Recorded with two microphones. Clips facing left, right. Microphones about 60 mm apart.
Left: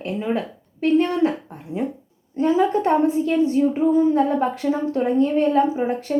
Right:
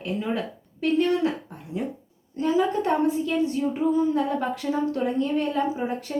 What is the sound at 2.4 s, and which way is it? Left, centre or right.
A woman's voice, left.